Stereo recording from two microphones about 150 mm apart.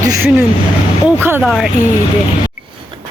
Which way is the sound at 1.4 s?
Centre (ahead or behind).